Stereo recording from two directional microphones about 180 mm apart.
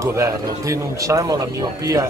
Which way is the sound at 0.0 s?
15° right (ahead or behind).